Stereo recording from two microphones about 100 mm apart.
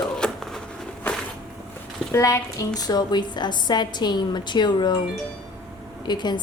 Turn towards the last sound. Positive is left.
turn(degrees=45)  # may be behind; listen again after turning